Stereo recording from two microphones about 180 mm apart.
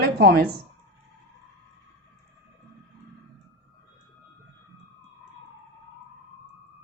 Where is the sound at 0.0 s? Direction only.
60° right (ahead or behind).